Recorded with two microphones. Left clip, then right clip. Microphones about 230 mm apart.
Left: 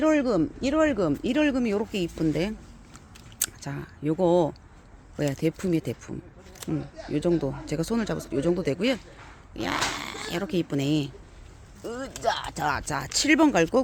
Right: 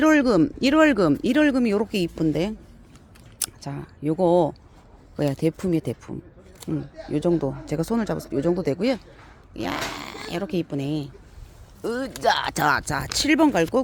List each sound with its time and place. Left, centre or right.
0.0 s speech: right
2.2 s speech: centre
11.8 s speech: right
12.5 s speech: right
12.8 s speech: centre